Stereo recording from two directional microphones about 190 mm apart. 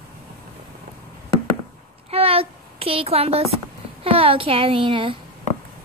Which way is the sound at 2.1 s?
30° right (ahead or behind).